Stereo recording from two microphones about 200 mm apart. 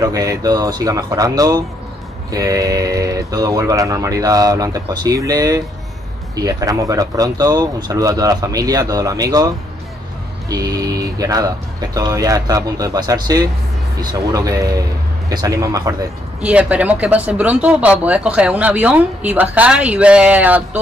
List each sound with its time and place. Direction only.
0.0 s speech: 15° right (ahead or behind)
10.5 s speech: 20° right (ahead or behind)
16.3 s speech: 5° right (ahead or behind)